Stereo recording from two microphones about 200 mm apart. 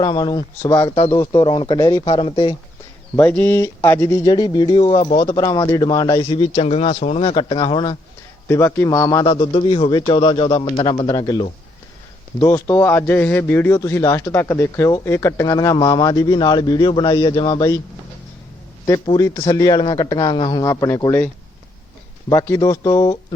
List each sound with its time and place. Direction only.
0.0 s a man's voice: 20° left (ahead or behind)
3.2 s a man's voice: 10° left (ahead or behind); by 5.1 s 30° left (ahead or behind)
5.2 s a man's voice: 20° left (ahead or behind)
19.0 s a man's voice: 20° left (ahead or behind)
22.3 s a man's voice: 15° left (ahead or behind)